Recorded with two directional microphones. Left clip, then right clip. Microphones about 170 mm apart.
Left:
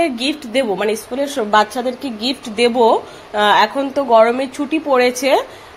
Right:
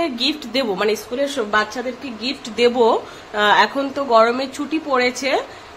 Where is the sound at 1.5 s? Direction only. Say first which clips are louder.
Left 9 dB; 25° left (ahead or behind).